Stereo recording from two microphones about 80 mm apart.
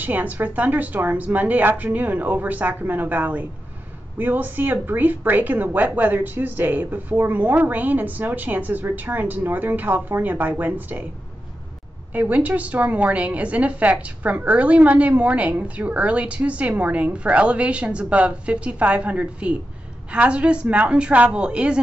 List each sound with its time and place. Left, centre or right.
0.0 s speech: right
12.1 s a woman's voice: right